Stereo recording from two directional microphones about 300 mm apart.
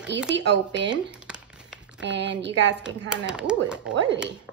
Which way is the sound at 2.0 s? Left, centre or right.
Right.